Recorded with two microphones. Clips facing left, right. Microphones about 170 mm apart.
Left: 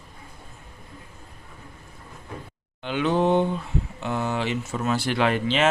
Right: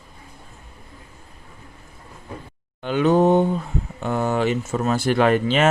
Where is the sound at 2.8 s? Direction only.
45° right (ahead or behind).